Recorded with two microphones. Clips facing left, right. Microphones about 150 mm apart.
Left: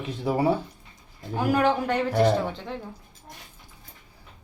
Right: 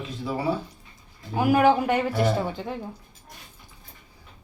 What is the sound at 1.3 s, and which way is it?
Speech, 10° right (ahead or behind).